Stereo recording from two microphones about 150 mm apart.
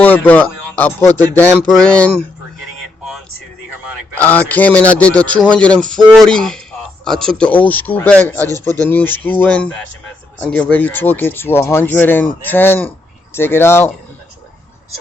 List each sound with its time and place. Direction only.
0.0 s speech: 10° left (ahead or behind)
4.2 s speech: 10° left (ahead or behind)